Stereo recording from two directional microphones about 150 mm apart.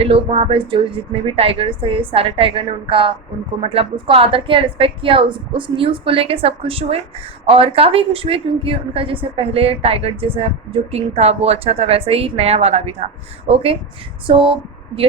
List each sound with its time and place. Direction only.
0.0 s a woman's voice: 40° right (ahead or behind)